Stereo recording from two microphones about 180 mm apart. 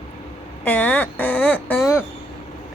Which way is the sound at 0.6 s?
10° left (ahead or behind).